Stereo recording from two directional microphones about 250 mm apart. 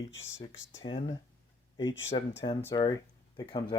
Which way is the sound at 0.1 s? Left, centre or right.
Left.